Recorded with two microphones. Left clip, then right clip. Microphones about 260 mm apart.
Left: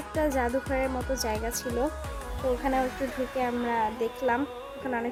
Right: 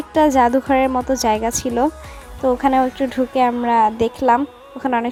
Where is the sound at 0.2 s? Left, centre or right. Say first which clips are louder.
Right 13 dB; right.